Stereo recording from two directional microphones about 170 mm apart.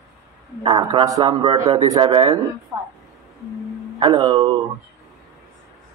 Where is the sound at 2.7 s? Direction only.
20° right (ahead or behind).